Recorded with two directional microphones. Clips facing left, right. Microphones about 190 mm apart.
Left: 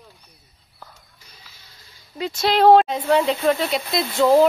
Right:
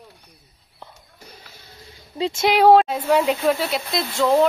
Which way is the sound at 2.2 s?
25° right (ahead or behind).